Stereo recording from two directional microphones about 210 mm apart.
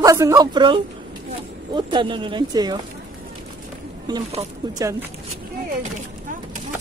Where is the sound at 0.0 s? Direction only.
15° right (ahead or behind).